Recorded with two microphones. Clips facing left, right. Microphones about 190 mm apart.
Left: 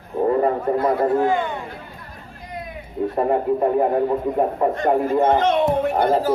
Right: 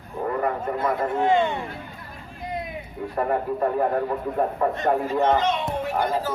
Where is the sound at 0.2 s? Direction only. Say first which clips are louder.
Left 7 dB; 25° left (ahead or behind).